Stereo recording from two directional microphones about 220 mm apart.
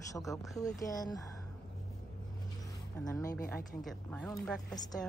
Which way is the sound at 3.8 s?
Centre (ahead or behind).